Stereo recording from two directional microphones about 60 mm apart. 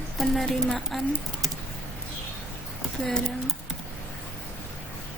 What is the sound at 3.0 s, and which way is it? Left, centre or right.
Speech, centre.